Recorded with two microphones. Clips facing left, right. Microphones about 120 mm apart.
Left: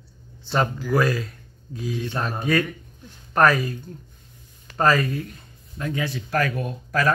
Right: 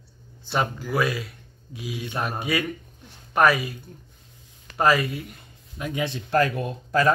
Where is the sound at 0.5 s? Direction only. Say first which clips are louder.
Left 3 dB; 5° right (ahead or behind).